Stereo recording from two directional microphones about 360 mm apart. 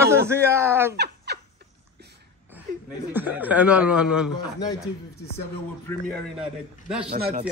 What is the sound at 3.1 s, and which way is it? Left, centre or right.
Speech, centre.